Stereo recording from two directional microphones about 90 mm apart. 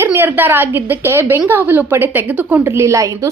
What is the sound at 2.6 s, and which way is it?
Speech, 30° right (ahead or behind).